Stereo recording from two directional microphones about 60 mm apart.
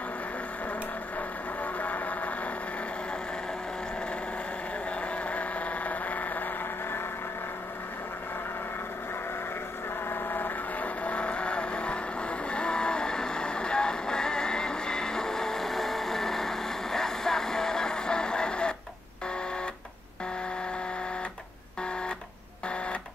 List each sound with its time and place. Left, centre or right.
1.6 s vehicle: left
5.0 s vehicle: left
10.0 s vehicle: left
11.1 s vehicle: centre